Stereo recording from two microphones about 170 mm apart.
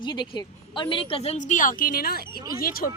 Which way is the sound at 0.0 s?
25° left (ahead or behind).